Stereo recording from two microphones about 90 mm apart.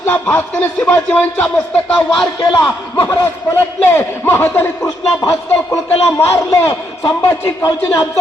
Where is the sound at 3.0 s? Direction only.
30° left (ahead or behind).